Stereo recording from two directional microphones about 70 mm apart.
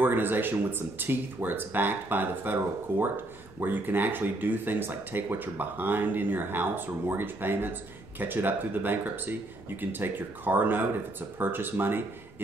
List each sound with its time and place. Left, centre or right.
0.0 s speech: right